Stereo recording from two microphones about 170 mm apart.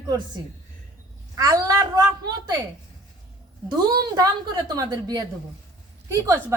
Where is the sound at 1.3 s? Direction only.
20° right (ahead or behind).